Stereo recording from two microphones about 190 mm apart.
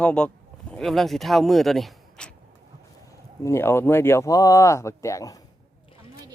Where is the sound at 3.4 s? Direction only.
15° left (ahead or behind).